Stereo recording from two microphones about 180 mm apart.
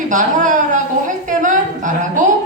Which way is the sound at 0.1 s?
45° right (ahead or behind).